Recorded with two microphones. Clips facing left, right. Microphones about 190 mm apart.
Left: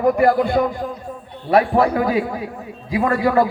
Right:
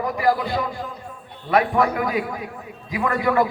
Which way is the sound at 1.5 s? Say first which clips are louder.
Left 4 dB; 30° left (ahead or behind).